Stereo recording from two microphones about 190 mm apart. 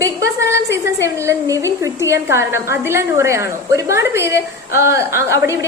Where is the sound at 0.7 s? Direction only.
15° right (ahead or behind).